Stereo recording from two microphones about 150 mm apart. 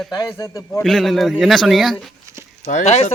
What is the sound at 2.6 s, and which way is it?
Speech, 50° left (ahead or behind).